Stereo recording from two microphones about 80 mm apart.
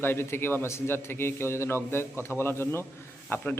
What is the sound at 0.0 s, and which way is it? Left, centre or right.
A man's voice, left.